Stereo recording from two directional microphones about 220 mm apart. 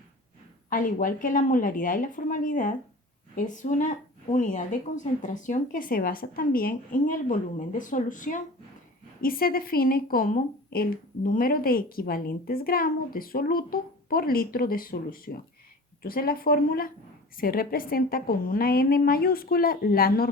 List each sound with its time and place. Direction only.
0.7 s a woman's voice: 40° left (ahead or behind)